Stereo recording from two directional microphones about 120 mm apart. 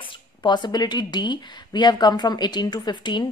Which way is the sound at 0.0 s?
40° left (ahead or behind).